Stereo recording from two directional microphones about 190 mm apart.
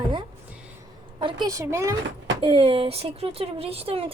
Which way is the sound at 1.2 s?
25° right (ahead or behind).